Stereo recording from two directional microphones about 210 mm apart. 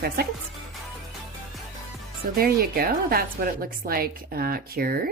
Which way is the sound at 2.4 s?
45° right (ahead or behind).